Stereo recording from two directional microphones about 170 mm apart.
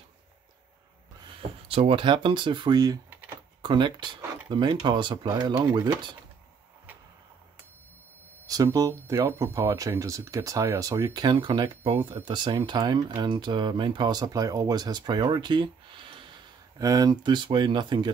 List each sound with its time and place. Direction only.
1.2 s speech: 35° right (ahead or behind)
8.5 s speech: 20° right (ahead or behind)